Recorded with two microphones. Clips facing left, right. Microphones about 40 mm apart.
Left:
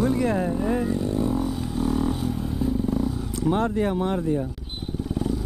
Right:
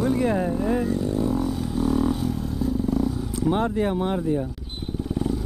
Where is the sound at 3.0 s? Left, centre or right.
Centre.